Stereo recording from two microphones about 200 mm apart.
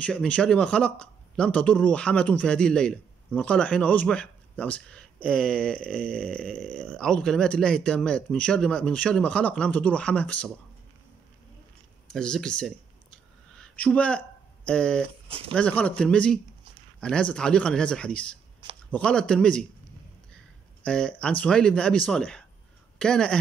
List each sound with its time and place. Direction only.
0.0 s speech: 5° left (ahead or behind)
12.1 s speech: 5° left (ahead or behind)
15.2 s speech: 30° right (ahead or behind)
15.5 s speech: 5° left (ahead or behind)
20.8 s speech: 5° left (ahead or behind)